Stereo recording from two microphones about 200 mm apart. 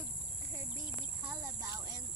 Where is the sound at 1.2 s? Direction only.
10° right (ahead or behind).